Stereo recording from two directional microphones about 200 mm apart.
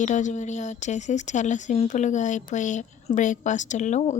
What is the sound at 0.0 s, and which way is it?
Speech, 40° left (ahead or behind).